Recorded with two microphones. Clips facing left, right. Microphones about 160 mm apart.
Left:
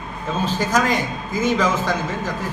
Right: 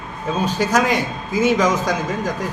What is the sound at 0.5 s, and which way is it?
A man's voice, 10° right (ahead or behind).